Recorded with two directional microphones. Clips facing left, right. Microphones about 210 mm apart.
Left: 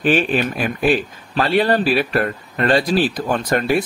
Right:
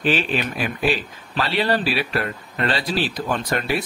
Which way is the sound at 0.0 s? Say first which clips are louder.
Left 5 dB; 50° left (ahead or behind).